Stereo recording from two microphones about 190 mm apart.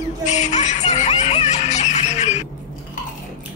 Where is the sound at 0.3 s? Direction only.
40° left (ahead or behind).